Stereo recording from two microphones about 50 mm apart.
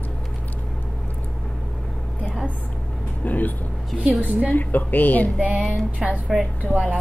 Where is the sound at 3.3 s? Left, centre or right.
Left.